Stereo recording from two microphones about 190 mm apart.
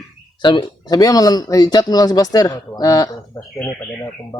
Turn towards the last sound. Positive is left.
turn(degrees=15)  # may be behind; listen again after turning